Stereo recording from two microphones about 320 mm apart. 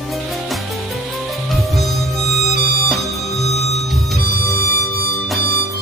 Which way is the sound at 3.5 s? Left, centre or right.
Centre.